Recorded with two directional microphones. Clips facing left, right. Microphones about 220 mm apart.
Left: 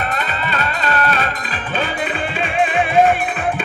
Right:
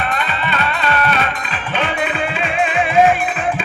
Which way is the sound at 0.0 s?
40° left (ahead or behind).